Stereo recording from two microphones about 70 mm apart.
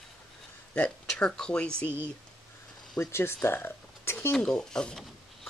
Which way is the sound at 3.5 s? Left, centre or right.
Left.